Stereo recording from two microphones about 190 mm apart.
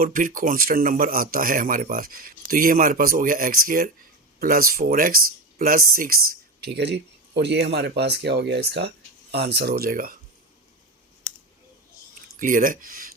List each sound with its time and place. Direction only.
0.0 s speech: 45° right (ahead or behind)
6.7 s speech: 60° right (ahead or behind)
12.4 s speech: 45° right (ahead or behind)